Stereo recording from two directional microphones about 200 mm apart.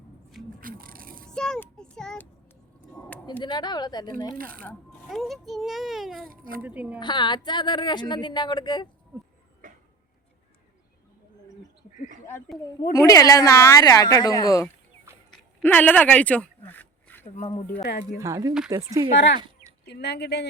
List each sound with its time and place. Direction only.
0.6 s a sound: 45° right (ahead or behind)
1.3 s child singing: 5° left (ahead or behind)
2.9 s a sound: 5° left (ahead or behind)
3.4 s speech: 20° left (ahead or behind)
4.4 s a child's voice: 45° right (ahead or behind)
4.6 s a child's voice: 5° left (ahead or behind)
6.2 s a child's voice: 45° right (ahead or behind)
6.6 s a woman's voice: 5° right (ahead or behind)
7.0 s speech: 20° left (ahead or behind)
9.6 s tick-tock: 40° right (ahead or behind)
12.9 s a woman's voice: 15° left (ahead or behind)
17.4 s speech: 25° left (ahead or behind)
18.2 s a woman's voice: 15° right (ahead or behind)
19.8 s speech: 55° left (ahead or behind)